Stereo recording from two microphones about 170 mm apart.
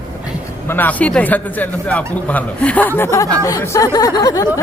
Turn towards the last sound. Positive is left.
turn(degrees=20)  # may be behind; listen again after turning